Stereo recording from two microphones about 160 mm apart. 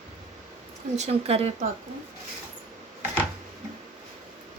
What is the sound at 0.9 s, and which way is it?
Speech, 45° right (ahead or behind).